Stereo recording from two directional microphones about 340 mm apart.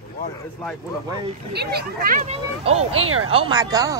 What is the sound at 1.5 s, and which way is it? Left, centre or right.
Speech, right.